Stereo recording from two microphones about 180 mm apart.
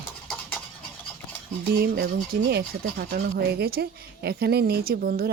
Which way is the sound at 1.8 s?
60° right (ahead or behind).